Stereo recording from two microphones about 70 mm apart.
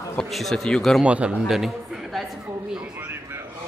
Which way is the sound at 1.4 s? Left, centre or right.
Centre.